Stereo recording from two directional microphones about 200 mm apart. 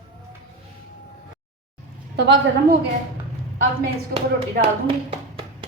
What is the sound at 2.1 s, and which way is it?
Speech, 60° right (ahead or behind).